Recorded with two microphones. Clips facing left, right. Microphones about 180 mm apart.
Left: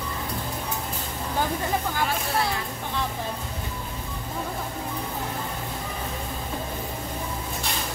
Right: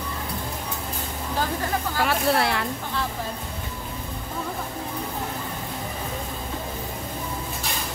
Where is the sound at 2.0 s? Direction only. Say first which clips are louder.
Right 4 dB; 70° right (ahead or behind).